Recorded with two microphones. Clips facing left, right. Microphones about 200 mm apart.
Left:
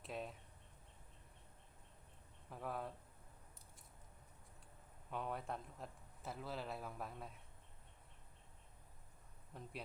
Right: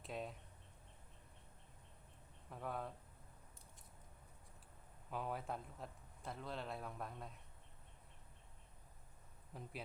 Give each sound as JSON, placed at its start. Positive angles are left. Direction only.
{"t": 0.0, "sound": "a sound", "side_deg": 0}
{"t": 2.5, "sound": "speech", "side_deg": 0}
{"t": 5.1, "sound": "speech", "side_deg": 0}
{"t": 9.5, "sound": "speech", "side_deg": 0}